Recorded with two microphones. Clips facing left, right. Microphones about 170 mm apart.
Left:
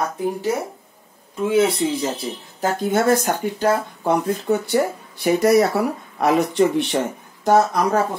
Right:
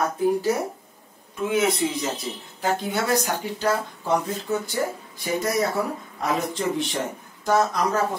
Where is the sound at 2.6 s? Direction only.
50° left (ahead or behind).